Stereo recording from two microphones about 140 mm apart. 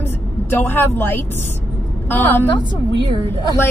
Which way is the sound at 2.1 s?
10° left (ahead or behind).